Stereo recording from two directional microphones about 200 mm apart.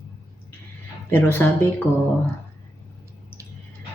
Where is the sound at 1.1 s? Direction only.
10° left (ahead or behind).